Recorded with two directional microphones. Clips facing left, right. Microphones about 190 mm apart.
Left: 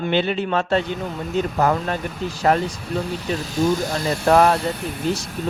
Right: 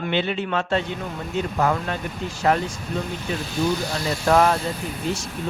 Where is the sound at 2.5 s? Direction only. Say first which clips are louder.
Left 2 dB; 40° left (ahead or behind).